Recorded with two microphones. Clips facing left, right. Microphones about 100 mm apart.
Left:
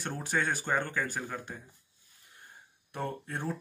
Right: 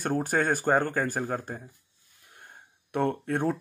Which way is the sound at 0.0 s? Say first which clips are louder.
Right 6 dB; 50° right (ahead or behind).